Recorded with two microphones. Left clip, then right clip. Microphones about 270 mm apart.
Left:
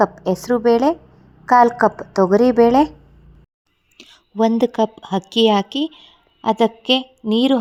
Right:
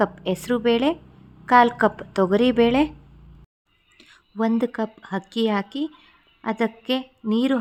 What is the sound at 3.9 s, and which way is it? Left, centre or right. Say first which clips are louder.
Speech: left 8 dB; centre.